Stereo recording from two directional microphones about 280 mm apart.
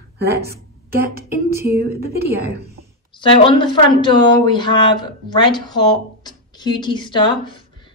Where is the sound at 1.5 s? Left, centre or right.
Centre.